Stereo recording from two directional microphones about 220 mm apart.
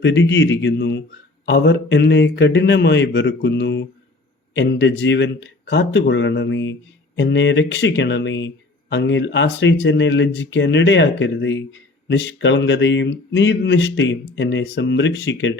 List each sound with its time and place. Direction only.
0.0 s a man's voice: 55° left (ahead or behind)